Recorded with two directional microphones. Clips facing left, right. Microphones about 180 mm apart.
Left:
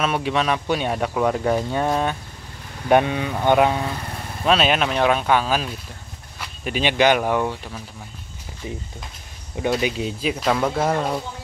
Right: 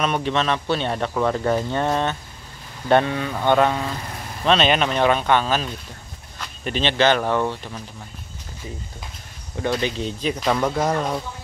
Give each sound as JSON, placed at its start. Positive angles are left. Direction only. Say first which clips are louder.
{"t": 0.0, "sound": "speech", "louder": "even", "side_deg": 5}
{"t": 9.6, "sound": "speech", "louder": "left 1 dB", "side_deg": 10}